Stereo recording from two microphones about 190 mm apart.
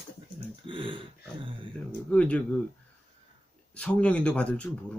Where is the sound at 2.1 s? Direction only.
5° left (ahead or behind).